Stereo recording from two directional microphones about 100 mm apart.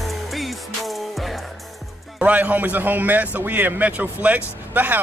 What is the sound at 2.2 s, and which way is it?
A man's voice, 15° right (ahead or behind).